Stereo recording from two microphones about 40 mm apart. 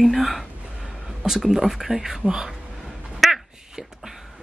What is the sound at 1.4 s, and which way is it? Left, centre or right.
Speech, centre.